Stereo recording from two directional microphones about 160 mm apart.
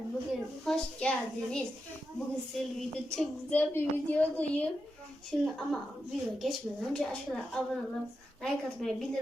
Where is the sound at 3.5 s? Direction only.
15° left (ahead or behind).